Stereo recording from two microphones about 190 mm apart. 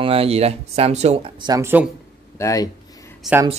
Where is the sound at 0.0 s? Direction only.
30° right (ahead or behind); by 1.9 s 10° right (ahead or behind).